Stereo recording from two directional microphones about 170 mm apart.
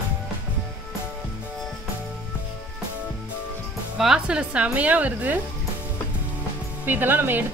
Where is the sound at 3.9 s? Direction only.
5° right (ahead or behind).